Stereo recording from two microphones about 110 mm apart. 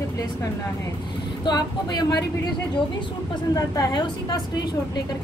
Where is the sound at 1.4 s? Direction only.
40° left (ahead or behind).